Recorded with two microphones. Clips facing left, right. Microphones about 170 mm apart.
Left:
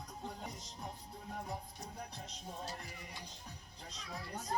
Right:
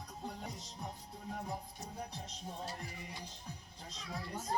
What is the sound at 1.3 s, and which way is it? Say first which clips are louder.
Music: right 2 dB; 5° right (ahead or behind).